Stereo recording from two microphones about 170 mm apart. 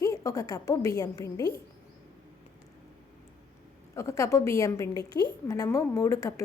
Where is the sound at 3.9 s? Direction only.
20° left (ahead or behind).